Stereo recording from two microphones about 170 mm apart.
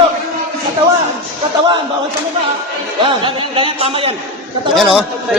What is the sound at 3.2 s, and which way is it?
Speech, 30° right (ahead or behind).